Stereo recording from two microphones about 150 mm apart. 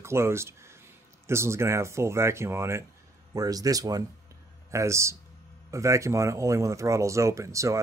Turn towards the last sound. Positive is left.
turn(degrees=-20)  # may be behind; listen again after turning